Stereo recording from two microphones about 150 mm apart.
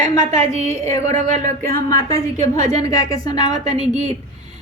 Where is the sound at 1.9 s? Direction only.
20° left (ahead or behind).